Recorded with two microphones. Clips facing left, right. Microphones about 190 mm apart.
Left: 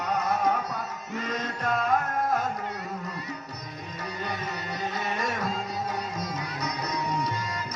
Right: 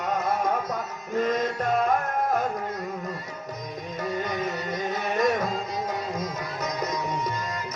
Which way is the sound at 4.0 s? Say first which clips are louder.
Right 6 dB; 45° right (ahead or behind).